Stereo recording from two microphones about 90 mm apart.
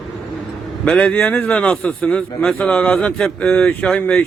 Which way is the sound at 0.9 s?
15° left (ahead or behind).